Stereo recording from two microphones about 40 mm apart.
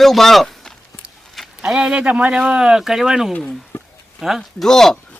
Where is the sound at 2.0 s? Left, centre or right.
Right.